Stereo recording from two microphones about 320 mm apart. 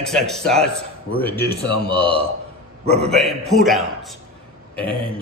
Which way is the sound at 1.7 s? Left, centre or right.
Centre.